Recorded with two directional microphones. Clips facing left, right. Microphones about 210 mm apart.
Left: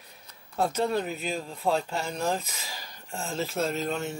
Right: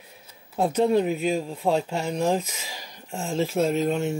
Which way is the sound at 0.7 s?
10° right (ahead or behind).